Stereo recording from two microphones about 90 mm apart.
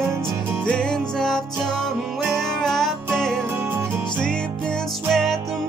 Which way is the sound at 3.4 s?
25° right (ahead or behind).